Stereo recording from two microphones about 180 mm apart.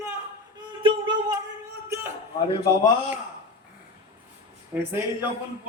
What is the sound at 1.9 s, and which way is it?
Speech, 15° right (ahead or behind).